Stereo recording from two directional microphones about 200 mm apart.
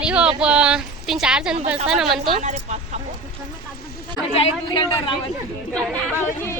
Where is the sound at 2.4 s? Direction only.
35° right (ahead or behind).